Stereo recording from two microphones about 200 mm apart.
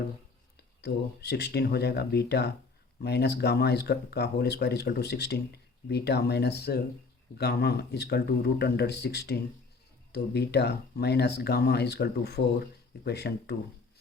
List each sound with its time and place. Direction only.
0.8 s speech: 55° left (ahead or behind)